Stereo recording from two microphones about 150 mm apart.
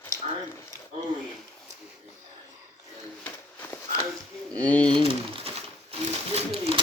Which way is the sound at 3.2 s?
15° left (ahead or behind).